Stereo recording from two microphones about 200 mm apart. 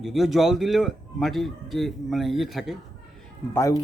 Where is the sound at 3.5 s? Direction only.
15° left (ahead or behind).